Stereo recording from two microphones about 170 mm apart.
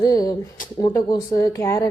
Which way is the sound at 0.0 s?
20° left (ahead or behind).